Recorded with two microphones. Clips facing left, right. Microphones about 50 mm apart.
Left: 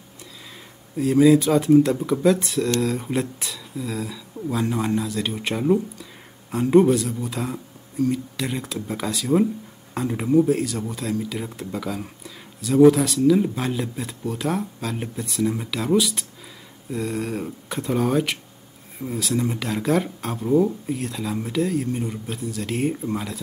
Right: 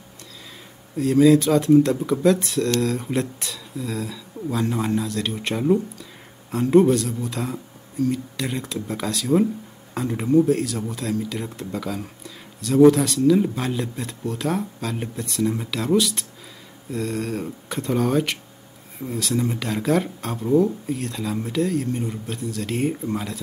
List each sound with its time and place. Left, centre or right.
0.9 s speech: centre